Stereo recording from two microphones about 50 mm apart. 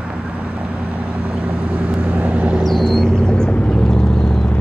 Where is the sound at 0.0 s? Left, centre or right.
Right.